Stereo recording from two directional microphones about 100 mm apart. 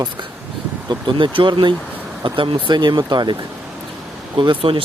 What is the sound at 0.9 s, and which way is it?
Speech, 50° right (ahead or behind).